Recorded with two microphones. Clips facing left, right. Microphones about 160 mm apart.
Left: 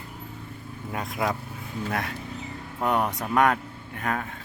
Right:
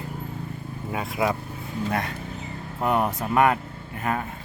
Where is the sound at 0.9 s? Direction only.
5° right (ahead or behind).